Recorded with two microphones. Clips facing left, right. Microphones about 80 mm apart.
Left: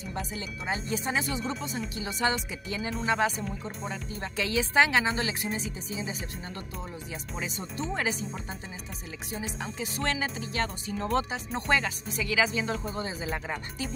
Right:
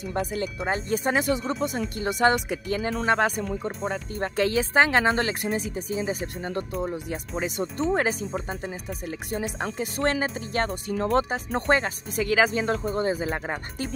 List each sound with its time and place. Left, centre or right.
0.0 s speech: right